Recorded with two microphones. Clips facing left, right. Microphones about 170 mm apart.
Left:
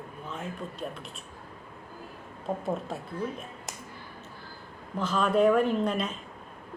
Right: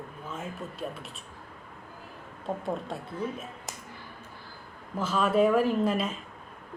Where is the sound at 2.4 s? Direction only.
5° left (ahead or behind).